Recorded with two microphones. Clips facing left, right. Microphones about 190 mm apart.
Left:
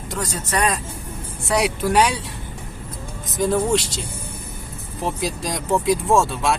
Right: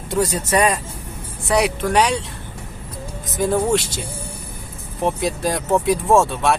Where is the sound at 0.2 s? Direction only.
10° right (ahead or behind).